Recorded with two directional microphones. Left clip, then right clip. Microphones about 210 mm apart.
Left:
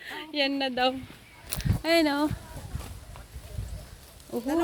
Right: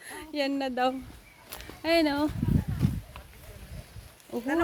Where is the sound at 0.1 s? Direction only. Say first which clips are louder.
Left 2 dB; 10° right (ahead or behind).